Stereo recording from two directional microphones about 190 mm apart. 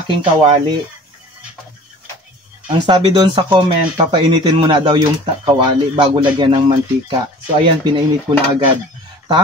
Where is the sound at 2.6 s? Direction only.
25° right (ahead or behind).